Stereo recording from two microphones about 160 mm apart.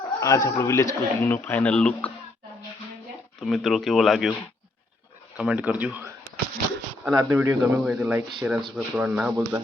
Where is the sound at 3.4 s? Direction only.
Centre (ahead or behind).